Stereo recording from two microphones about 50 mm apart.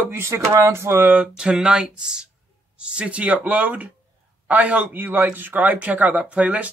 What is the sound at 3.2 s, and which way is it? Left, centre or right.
A man's voice, right.